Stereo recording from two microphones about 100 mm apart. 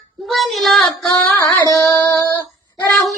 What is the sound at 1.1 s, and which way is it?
Music, 15° left (ahead or behind).